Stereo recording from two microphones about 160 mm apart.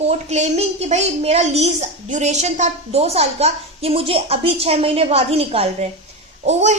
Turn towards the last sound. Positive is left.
turn(degrees=-45)  # may be behind; listen again after turning